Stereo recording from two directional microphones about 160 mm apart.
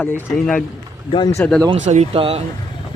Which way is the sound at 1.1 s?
30° left (ahead or behind).